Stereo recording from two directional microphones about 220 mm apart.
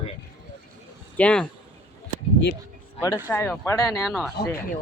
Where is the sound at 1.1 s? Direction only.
5° left (ahead or behind).